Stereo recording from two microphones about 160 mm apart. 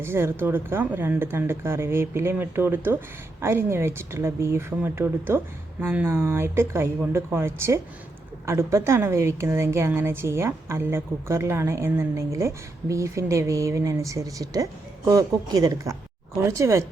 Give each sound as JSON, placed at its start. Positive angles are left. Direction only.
{"t": 0.0, "sound": "a woman's voice", "side_deg": -15}